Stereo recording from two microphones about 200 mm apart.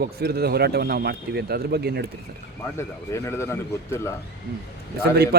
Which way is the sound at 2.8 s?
15° left (ahead or behind).